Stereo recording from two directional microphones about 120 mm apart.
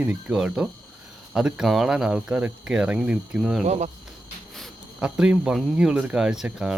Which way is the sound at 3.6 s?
70° right (ahead or behind).